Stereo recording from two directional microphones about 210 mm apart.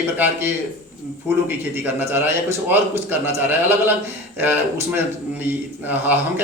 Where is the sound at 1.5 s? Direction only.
10° right (ahead or behind).